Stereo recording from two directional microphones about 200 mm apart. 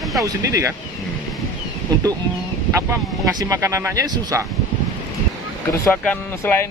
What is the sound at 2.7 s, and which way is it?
Speech, 15° right (ahead or behind).